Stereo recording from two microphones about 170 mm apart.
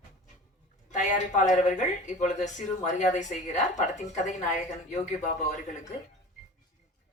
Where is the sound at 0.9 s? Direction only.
45° left (ahead or behind).